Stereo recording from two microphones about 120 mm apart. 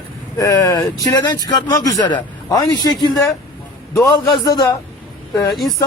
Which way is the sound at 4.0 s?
30° left (ahead or behind).